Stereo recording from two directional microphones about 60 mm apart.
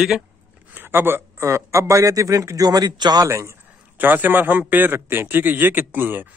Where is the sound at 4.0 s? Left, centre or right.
Right.